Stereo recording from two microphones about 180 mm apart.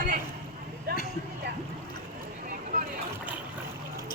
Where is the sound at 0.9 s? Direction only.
60° right (ahead or behind).